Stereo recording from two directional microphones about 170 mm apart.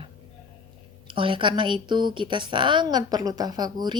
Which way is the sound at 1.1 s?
30° right (ahead or behind).